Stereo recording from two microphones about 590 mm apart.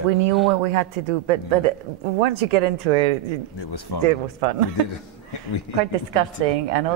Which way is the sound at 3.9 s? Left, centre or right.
Left.